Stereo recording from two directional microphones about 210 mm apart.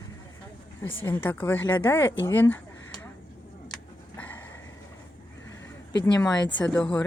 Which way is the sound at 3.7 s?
10° left (ahead or behind).